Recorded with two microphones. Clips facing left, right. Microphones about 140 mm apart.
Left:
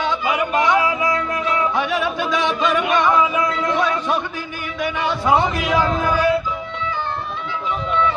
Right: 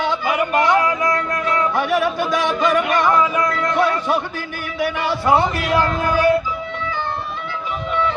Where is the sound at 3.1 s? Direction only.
5° left (ahead or behind).